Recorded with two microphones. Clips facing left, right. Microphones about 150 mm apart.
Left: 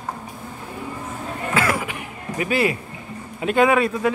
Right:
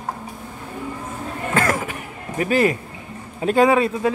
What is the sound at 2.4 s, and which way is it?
A man's voice, 40° right (ahead or behind).